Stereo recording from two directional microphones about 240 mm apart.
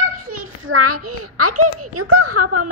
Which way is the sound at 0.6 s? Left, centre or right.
Right.